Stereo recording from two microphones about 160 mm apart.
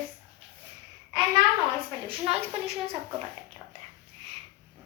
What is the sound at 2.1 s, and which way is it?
Speech, 40° right (ahead or behind).